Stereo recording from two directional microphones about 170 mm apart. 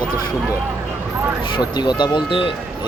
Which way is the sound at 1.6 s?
25° left (ahead or behind).